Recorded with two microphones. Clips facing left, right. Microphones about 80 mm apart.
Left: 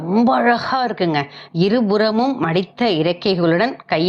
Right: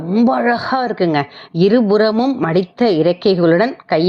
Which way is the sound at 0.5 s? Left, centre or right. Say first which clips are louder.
Right 1 dB; right.